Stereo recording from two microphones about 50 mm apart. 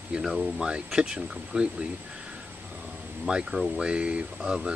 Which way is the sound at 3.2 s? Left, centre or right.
Centre.